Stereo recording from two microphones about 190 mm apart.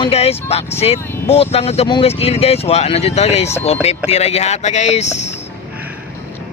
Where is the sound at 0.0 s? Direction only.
30° left (ahead or behind).